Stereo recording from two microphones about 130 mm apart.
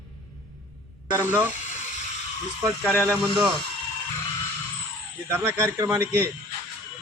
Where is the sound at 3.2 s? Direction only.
5° right (ahead or behind).